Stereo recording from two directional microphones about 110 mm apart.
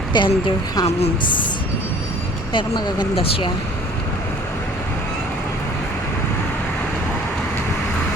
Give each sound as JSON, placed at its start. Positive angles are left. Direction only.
{"t": 0.1, "sound": "speech", "side_deg": 45}
{"t": 0.9, "sound": "a woman's voice", "side_deg": 70}
{"t": 2.5, "sound": "speech", "side_deg": 45}